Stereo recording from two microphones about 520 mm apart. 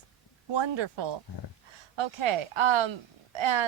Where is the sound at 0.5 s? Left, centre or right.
Right.